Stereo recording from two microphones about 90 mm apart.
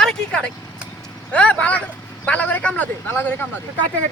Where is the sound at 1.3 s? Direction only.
15° left (ahead or behind).